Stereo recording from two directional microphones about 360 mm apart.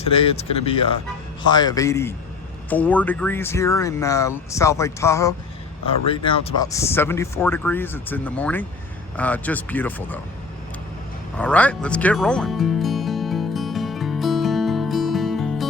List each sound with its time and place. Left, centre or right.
0.0 s speech: centre
11.3 s music: centre